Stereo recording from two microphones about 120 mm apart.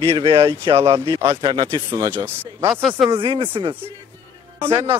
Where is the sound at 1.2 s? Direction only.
35° right (ahead or behind).